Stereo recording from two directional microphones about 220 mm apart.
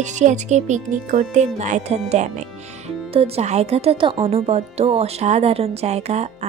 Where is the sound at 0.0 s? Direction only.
35° right (ahead or behind).